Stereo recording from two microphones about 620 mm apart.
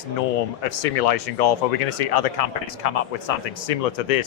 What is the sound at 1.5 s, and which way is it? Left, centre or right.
Speech, left.